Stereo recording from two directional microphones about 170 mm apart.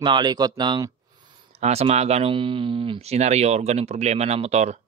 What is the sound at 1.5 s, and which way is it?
Speech, 35° right (ahead or behind).